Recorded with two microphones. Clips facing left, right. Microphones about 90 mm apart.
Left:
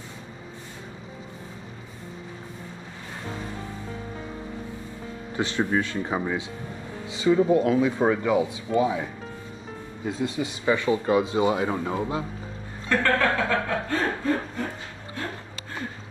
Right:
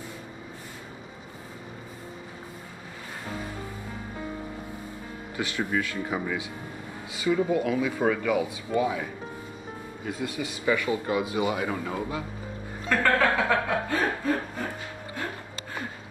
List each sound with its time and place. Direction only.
5.3 s speech: 30° left (ahead or behind)
10.0 s speech: 25° left (ahead or behind)
12.9 s speech: 15° right (ahead or behind)